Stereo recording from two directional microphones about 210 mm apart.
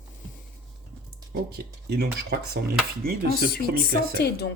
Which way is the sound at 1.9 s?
50° right (ahead or behind).